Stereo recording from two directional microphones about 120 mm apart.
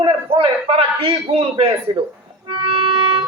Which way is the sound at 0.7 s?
45° right (ahead or behind).